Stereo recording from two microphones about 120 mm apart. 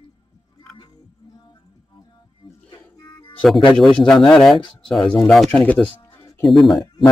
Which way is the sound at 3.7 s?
5° left (ahead or behind).